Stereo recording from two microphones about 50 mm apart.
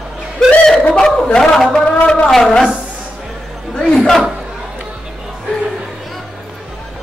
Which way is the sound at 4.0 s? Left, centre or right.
Centre.